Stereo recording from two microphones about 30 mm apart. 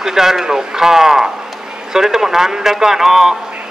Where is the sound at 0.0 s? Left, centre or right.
Centre.